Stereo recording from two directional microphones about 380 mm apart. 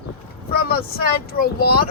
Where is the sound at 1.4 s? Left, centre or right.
Left.